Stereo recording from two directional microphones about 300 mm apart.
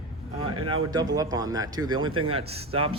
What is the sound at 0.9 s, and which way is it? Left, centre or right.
Speech, centre.